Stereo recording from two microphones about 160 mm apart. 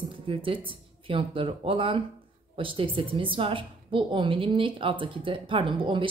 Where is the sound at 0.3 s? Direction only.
35° right (ahead or behind).